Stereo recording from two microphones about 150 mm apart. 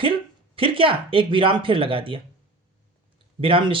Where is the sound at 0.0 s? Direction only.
35° right (ahead or behind).